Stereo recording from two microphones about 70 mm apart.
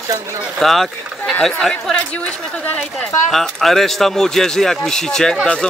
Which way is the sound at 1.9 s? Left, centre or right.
Centre.